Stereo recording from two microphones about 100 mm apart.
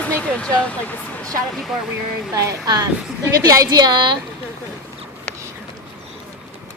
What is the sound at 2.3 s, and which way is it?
A woman's voice, 35° right (ahead or behind).